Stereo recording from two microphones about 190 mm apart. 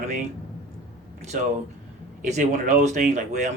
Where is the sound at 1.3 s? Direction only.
40° right (ahead or behind).